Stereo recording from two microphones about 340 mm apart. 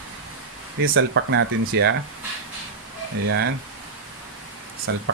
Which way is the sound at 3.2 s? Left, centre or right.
Right.